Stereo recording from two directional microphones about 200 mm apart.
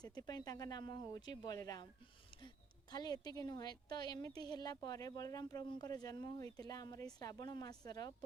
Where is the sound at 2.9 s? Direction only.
20° left (ahead or behind).